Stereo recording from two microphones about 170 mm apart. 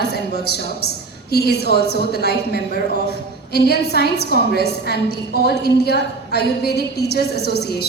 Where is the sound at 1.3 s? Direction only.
70° left (ahead or behind).